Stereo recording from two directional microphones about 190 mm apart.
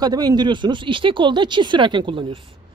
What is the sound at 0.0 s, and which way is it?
Speech, 20° right (ahead or behind).